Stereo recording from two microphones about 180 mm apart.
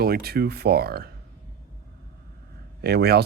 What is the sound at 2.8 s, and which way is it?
Speech, 60° right (ahead or behind).